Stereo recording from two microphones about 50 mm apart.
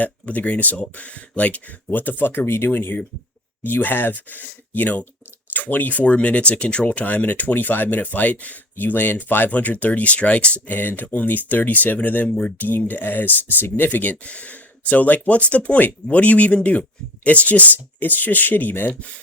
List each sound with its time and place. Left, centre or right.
0.0 s speech: left
8.7 s speech: left
9.5 s speech: left
10.8 s speech: left
12.3 s speech: centre
12.5 s speech: left